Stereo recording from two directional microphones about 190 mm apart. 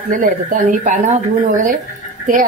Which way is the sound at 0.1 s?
45° right (ahead or behind).